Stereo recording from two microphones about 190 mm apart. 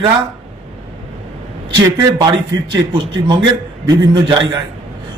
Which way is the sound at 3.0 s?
25° right (ahead or behind).